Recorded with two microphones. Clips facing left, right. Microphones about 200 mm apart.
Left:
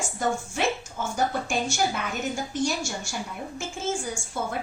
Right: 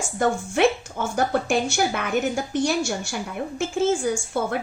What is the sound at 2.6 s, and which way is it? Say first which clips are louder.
Speech: right 5 dB; 60° right (ahead or behind).